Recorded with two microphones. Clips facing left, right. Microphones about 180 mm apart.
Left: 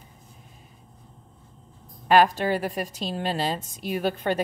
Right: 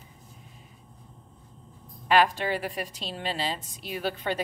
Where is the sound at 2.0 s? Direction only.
45° left (ahead or behind).